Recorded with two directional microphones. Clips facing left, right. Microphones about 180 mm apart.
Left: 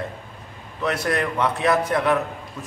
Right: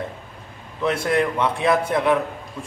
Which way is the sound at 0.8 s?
25° right (ahead or behind).